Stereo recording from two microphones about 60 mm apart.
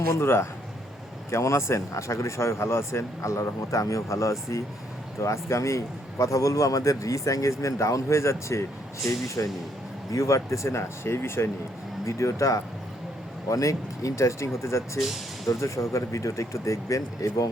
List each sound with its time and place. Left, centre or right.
0.2 s speech: left
1.3 s a man's voice: left
12.0 s a man's voice: left